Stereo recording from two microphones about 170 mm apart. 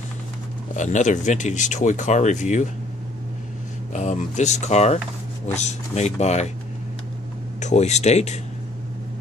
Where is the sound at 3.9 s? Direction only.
45° left (ahead or behind).